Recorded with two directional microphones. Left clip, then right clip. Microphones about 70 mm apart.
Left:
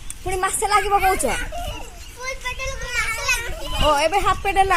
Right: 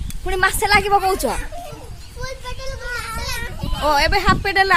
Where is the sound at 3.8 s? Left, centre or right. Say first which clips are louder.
Right 1 dB; right.